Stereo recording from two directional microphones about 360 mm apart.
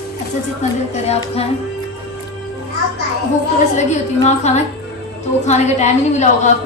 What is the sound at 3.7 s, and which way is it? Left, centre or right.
A woman's voice, centre.